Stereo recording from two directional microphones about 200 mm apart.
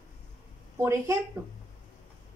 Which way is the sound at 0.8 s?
15° right (ahead or behind).